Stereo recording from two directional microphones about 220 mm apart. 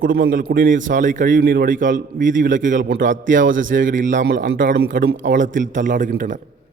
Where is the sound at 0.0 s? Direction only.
45° right (ahead or behind).